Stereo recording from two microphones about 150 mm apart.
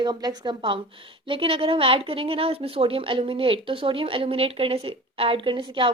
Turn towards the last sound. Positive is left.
turn(degrees=-35)  # may be behind; listen again after turning